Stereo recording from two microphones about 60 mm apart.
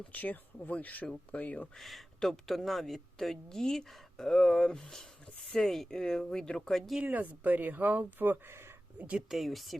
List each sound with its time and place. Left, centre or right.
0.0 s speech: left
1.7 s speech: centre
7.0 s speech: right
9.3 s speech: centre